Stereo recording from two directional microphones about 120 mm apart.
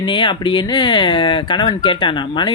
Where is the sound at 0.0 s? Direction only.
40° left (ahead or behind).